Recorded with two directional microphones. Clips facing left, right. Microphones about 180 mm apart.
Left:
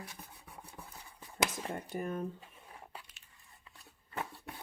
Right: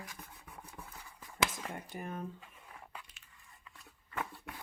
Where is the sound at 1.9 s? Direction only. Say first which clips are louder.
Left 5 dB; 40° left (ahead or behind).